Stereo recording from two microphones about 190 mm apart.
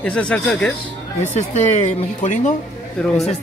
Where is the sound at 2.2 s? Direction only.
40° left (ahead or behind).